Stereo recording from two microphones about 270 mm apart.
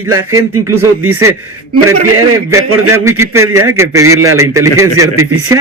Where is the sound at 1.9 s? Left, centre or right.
Right.